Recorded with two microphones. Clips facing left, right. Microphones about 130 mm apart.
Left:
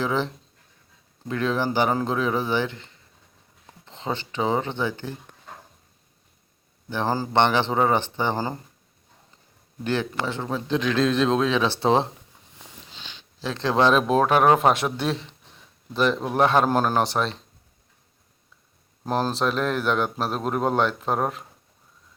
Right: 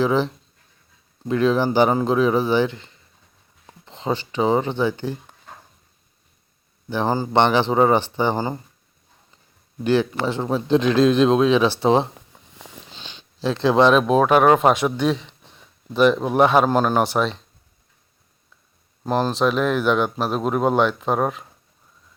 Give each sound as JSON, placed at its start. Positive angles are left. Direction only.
{"t": 0.0, "sound": "speech", "side_deg": -15}
{"t": 1.3, "sound": "speech", "side_deg": -20}
{"t": 6.9, "sound": "speech", "side_deg": -15}
{"t": 9.8, "sound": "speech", "side_deg": -10}
{"t": 11.8, "sound": "speech", "side_deg": 0}
{"t": 13.0, "sound": "a sound", "side_deg": -20}
{"t": 13.7, "sound": "speech", "side_deg": 0}
{"t": 19.0, "sound": "speech", "side_deg": 0}